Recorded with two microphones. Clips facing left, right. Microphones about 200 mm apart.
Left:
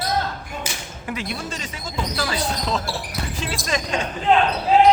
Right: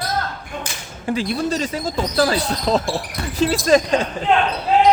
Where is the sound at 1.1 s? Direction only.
35° right (ahead or behind).